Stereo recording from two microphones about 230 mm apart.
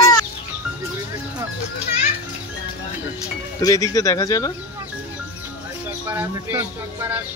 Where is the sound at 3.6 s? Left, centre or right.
Centre.